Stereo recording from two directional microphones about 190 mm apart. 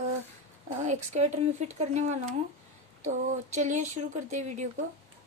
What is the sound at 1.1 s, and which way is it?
A woman's voice, 35° right (ahead or behind).